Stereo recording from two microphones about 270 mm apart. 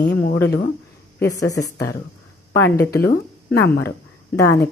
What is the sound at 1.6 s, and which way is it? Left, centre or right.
Speech, centre.